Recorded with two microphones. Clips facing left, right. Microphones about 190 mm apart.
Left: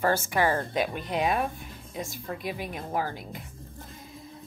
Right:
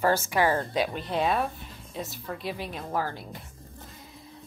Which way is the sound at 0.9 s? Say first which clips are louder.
Even; 15° left (ahead or behind).